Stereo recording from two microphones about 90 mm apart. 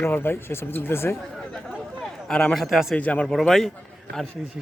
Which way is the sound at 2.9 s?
15° left (ahead or behind).